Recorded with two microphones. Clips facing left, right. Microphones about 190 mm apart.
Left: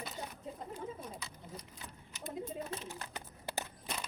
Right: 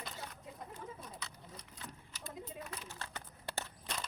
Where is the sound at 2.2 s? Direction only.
25° left (ahead or behind).